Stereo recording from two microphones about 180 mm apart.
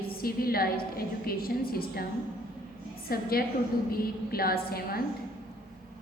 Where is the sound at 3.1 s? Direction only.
55° left (ahead or behind).